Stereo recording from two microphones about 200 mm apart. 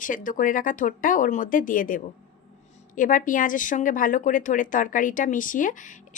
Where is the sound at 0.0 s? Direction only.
40° left (ahead or behind).